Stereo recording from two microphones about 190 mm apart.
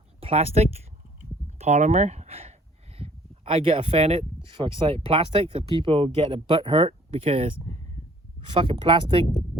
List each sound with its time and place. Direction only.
0.2 s speech: 30° right (ahead or behind)
1.5 s a sound: 35° right (ahead or behind)
4.4 s speech: 25° right (ahead or behind)